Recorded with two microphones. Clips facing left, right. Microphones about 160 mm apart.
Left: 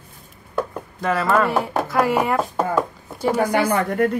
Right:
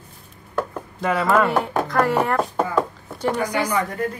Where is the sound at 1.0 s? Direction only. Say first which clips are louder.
Even; centre (ahead or behind).